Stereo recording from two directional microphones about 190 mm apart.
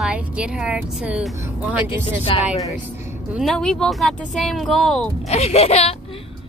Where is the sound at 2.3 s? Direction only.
30° left (ahead or behind).